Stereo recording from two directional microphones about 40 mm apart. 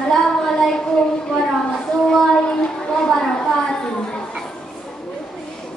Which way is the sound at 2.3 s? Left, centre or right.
Left.